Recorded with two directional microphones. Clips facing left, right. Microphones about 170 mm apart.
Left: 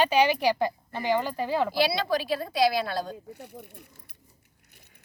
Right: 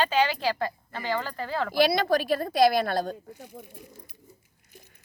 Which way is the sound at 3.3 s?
65° left (ahead or behind).